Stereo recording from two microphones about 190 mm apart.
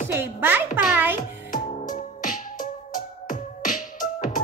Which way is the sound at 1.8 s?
45° left (ahead or behind).